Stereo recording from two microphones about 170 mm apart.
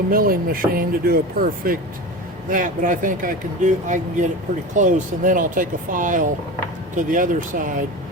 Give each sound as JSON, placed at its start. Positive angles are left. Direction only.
{"t": 0.1, "sound": "speech", "side_deg": -60}